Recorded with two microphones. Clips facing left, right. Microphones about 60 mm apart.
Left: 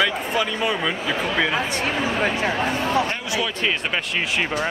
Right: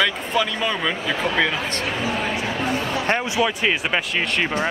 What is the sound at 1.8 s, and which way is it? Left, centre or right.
Speech, left.